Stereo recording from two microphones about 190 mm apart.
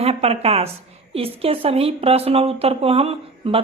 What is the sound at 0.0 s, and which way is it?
A woman's voice, 35° right (ahead or behind).